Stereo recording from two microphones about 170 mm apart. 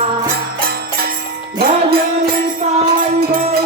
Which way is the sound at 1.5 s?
65° right (ahead or behind).